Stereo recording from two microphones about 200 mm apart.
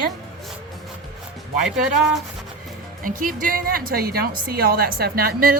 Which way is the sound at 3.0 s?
45° right (ahead or behind).